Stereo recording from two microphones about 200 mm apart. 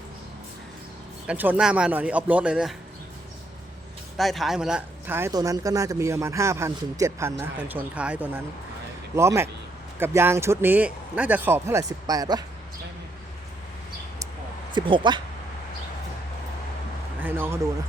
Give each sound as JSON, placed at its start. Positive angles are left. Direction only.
{"t": 1.3, "sound": "speech", "side_deg": -5}
{"t": 4.2, "sound": "speech", "side_deg": 0}
{"t": 14.8, "sound": "speech", "side_deg": -25}
{"t": 17.2, "sound": "speech", "side_deg": -10}